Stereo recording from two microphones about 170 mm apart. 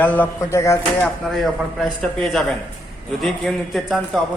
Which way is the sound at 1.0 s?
Centre (ahead or behind).